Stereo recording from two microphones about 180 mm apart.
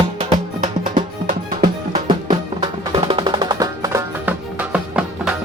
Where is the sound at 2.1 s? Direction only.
25° right (ahead or behind).